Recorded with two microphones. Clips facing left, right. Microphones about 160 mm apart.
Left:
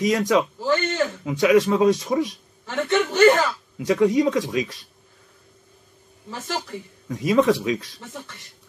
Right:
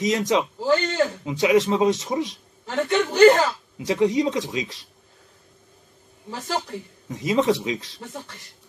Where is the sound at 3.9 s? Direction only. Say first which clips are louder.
Left 2 dB; 25° right (ahead or behind).